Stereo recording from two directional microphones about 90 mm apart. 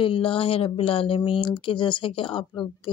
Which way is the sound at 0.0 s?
80° left.